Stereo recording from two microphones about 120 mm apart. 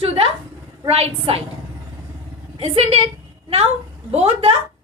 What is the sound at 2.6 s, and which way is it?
Speech, 55° right (ahead or behind).